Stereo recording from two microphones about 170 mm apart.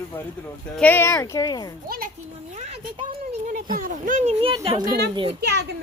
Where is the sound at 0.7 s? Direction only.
10° left (ahead or behind).